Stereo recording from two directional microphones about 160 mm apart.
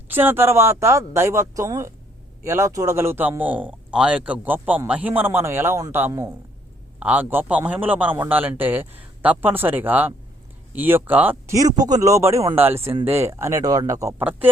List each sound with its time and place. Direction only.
0.1 s speech: 10° right (ahead or behind)